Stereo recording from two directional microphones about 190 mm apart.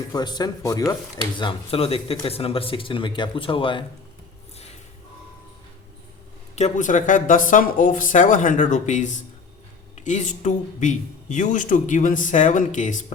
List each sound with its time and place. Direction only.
0.1 s speech: 20° left (ahead or behind)
6.6 s speech: 40° left (ahead or behind)